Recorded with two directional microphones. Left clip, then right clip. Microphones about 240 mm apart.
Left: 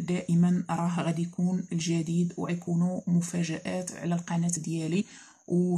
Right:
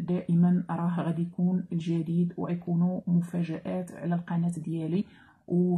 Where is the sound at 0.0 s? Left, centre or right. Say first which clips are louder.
Even; left.